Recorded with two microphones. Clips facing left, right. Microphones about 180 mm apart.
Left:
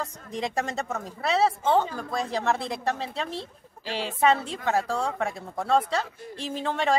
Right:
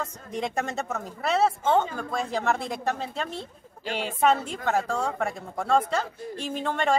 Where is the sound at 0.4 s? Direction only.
Centre (ahead or behind).